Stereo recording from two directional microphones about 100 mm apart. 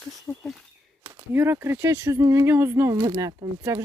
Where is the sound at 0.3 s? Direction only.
30° left (ahead or behind).